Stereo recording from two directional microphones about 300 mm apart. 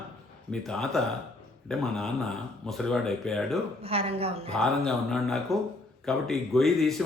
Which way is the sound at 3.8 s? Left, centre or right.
Centre.